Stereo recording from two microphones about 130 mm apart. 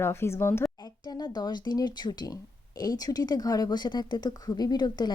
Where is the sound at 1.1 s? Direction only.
30° left (ahead or behind).